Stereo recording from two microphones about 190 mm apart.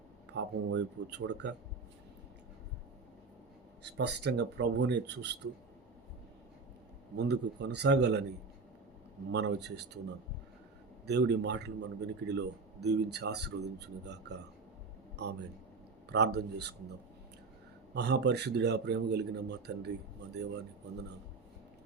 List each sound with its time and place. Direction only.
0.3 s speech: 65° right (ahead or behind)
3.8 s speech: 65° right (ahead or behind)
7.2 s speech: 65° right (ahead or behind)
11.0 s a man's voice: 60° right (ahead or behind)
17.9 s speech: 60° right (ahead or behind)